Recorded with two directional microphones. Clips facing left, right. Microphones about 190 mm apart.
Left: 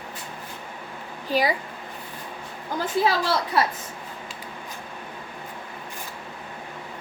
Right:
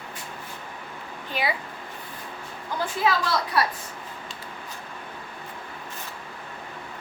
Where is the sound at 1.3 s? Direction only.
40° left (ahead or behind).